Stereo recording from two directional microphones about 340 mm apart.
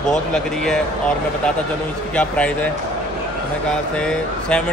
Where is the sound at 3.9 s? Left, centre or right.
Centre.